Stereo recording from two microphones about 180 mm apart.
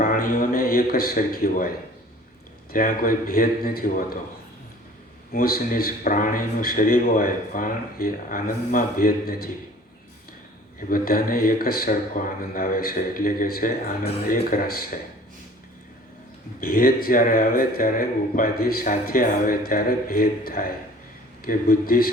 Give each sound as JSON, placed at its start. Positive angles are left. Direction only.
{"t": 0.0, "sound": "a man's voice", "side_deg": 50}
{"t": 2.7, "sound": "a man's voice", "side_deg": 50}
{"t": 5.3, "sound": "a man's voice", "side_deg": 55}
{"t": 10.8, "sound": "a man's voice", "side_deg": 50}
{"t": 16.6, "sound": "a man's voice", "side_deg": 55}